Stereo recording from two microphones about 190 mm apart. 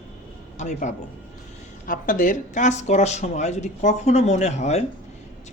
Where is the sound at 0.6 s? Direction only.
40° left (ahead or behind).